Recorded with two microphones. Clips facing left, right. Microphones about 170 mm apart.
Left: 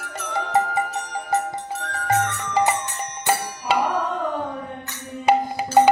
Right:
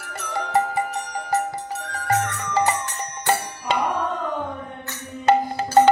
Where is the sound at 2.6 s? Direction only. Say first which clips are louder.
Left 1 dB; 15° left (ahead or behind).